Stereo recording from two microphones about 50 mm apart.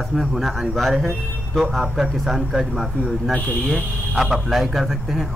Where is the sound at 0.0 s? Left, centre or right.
Centre.